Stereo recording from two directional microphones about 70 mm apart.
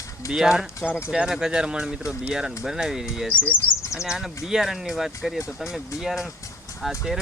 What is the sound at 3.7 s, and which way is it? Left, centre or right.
Speech, left.